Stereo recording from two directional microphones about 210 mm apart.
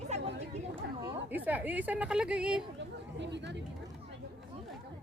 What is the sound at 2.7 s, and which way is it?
Speech, 55° right (ahead or behind).